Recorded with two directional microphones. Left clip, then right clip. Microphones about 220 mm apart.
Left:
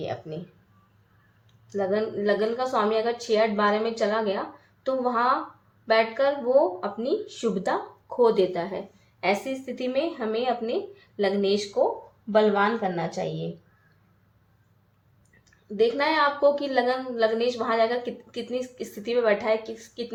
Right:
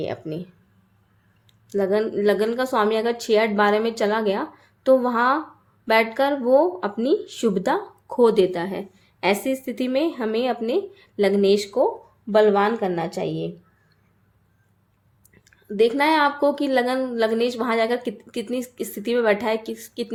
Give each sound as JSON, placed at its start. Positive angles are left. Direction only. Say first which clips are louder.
{"t": 0.0, "sound": "a woman's voice", "louder": "right 4 dB", "side_deg": -50}
{"t": 1.7, "sound": "a woman's voice", "louder": "right 5 dB", "side_deg": -50}
{"t": 15.4, "sound": "a woman's voice", "louder": "right 4 dB", "side_deg": -45}